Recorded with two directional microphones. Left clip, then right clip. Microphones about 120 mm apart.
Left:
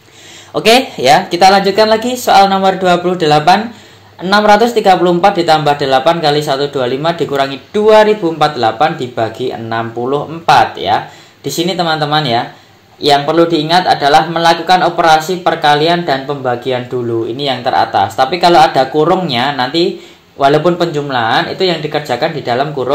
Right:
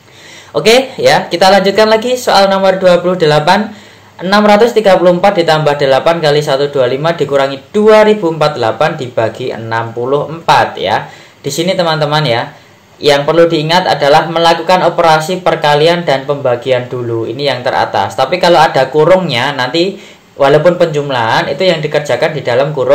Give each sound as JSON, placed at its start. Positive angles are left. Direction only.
{"t": 0.6, "sound": "speech", "side_deg": 50}
{"t": 1.4, "sound": "a man's voice", "side_deg": 25}